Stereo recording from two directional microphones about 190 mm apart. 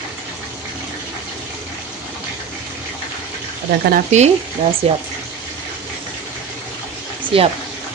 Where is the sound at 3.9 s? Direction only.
40° right (ahead or behind).